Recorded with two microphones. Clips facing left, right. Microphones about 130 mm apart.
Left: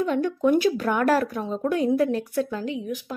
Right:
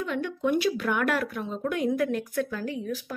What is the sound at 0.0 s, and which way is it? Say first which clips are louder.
Speech: left 6 dB; 40° left (ahead or behind).